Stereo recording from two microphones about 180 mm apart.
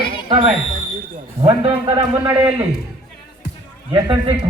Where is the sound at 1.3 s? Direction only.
30° right (ahead or behind).